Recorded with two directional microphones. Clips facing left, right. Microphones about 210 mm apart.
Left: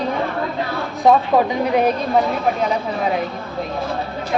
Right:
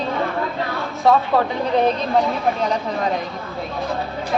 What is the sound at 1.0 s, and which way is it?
Speech, 15° left (ahead or behind).